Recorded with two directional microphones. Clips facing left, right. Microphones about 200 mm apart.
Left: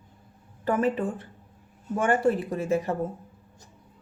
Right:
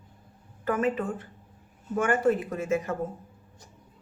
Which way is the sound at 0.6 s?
30° left (ahead or behind).